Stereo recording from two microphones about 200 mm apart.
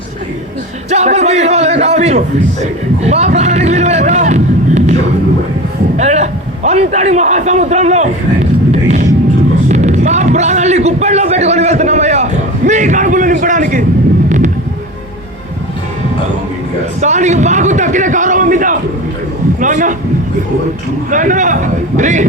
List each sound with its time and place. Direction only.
0.9 s a man's voice: 35° right (ahead or behind)
6.0 s a man's voice: 35° right (ahead or behind)
9.6 s a sound: 35° right (ahead or behind)
17.0 s a man's voice: 35° right (ahead or behind)
19.5 s a sound: 40° right (ahead or behind)
21.1 s a man's voice: 40° right (ahead or behind)